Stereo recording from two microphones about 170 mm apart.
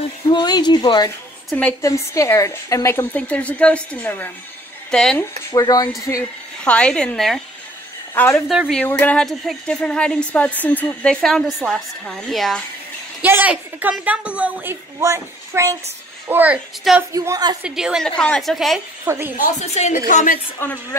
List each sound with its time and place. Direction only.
0.3 s speech: 25° left (ahead or behind)
1.5 s a woman's voice: 5° left (ahead or behind)
1.8 s a woman's voice: 20° left (ahead or behind)
5.5 s a woman's voice: 20° left (ahead or behind); by 7.4 s centre (ahead or behind)
8.1 s a woman's voice: 15° left (ahead or behind)
8.5 s speech: centre (ahead or behind)
13.2 s a woman's voice: 10° right (ahead or behind)
17.6 s speech: 5° right (ahead or behind)
19.0 s a woman's voice: 15° right (ahead or behind)
19.3 s a woman's voice: 45° left (ahead or behind)
20.5 s a woman's voice: 10° left (ahead or behind)